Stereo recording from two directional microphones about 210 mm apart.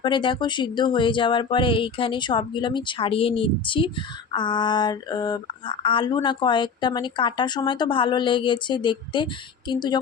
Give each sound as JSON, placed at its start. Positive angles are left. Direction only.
{"t": 0.0, "sound": "speech", "side_deg": 25}